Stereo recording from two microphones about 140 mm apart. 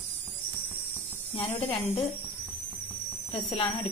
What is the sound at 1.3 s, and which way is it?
Speech, 45° left (ahead or behind).